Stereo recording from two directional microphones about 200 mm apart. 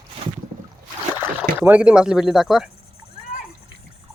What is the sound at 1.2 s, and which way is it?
Speech, 10° right (ahead or behind).